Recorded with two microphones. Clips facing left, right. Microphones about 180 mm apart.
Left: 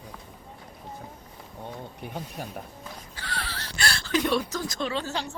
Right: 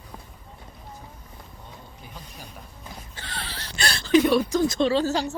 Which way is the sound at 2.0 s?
60° left (ahead or behind).